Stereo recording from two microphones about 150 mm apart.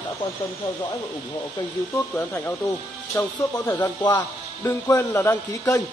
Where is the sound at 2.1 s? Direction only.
15° left (ahead or behind).